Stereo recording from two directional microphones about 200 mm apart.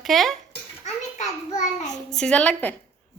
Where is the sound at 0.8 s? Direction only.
35° left (ahead or behind).